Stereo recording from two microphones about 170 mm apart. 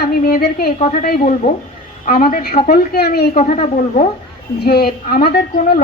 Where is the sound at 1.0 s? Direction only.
60° left (ahead or behind).